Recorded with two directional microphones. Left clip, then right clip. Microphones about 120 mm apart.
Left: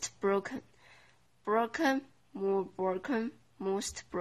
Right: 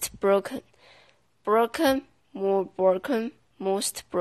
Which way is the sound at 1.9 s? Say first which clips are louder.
Right 6 dB; 25° right (ahead or behind).